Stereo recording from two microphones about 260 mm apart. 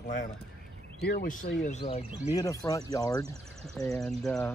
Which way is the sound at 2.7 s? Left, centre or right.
Centre.